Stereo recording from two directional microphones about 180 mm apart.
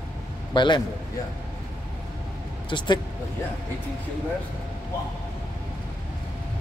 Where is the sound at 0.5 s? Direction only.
25° left (ahead or behind).